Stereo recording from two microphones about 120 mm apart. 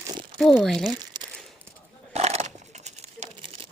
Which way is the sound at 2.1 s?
65° right (ahead or behind).